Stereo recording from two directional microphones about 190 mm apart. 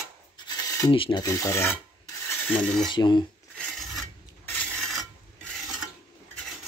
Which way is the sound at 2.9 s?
25° left (ahead or behind).